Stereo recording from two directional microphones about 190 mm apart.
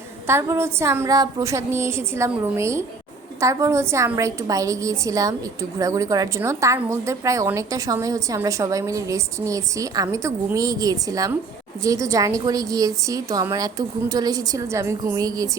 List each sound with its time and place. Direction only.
0.3 s a woman's voice: 15° right (ahead or behind)